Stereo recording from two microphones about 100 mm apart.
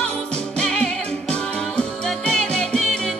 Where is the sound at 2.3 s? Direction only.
10° left (ahead or behind).